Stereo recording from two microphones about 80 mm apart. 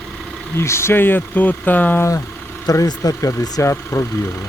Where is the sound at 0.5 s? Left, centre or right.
Left.